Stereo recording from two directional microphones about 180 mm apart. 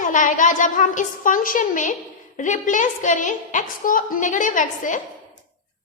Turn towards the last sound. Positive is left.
turn(degrees=45)  # may be behind; listen again after turning